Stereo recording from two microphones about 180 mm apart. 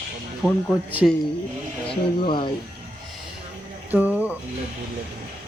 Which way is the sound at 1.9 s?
25° left (ahead or behind).